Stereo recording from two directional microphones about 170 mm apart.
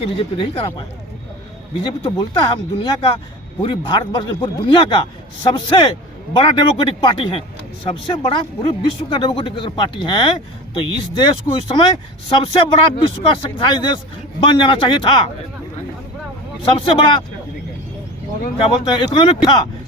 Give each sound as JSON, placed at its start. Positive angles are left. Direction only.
{"t": 0.2, "sound": "speech", "side_deg": 35}
{"t": 2.0, "sound": "a man's voice", "side_deg": 30}
{"t": 16.7, "sound": "speech", "side_deg": 30}
{"t": 18.6, "sound": "a man's voice", "side_deg": 30}